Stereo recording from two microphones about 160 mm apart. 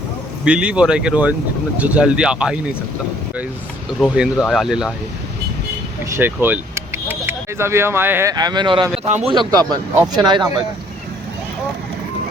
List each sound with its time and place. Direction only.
0.4 s speech: 5° right (ahead or behind)
4.0 s speech: 5° right (ahead or behind)
6.1 s speech: 15° right (ahead or behind); by 8.9 s 30° right (ahead or behind)
9.0 s speech: 45° right (ahead or behind)
9.3 s speech: 25° right (ahead or behind)